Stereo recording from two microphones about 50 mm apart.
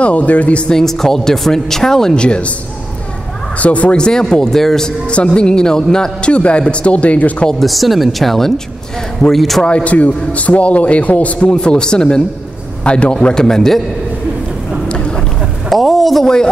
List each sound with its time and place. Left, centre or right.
0.0 s a man's voice: left
0.7 s speech: centre
2.2 s a man's voice: left
3.5 s speech: left; by 4.9 s centre
5.1 s a man's voice: left
7.4 s speech: centre
9.6 s speech: centre
9.8 s a man's voice: left; by 13.8 s centre
15.7 s speech: centre